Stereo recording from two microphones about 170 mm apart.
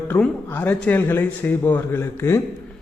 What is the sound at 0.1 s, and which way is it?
A man's voice, 10° left (ahead or behind).